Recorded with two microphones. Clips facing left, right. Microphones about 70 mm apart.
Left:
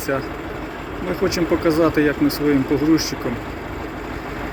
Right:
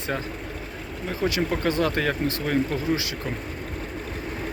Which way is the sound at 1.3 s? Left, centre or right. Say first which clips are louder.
Left 8 dB; centre.